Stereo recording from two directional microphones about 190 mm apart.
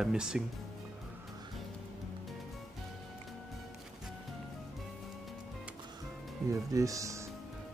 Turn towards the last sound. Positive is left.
turn(degrees=-15)  # may be behind; listen again after turning